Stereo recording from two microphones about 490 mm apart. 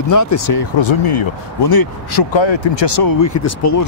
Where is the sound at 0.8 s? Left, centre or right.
Left.